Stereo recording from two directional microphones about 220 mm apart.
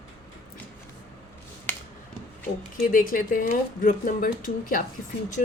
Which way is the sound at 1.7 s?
5° left (ahead or behind).